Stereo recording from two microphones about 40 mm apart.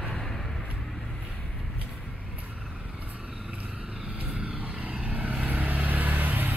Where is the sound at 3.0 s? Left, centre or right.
Right.